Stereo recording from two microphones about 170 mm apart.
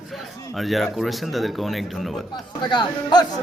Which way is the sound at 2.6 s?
25° left (ahead or behind).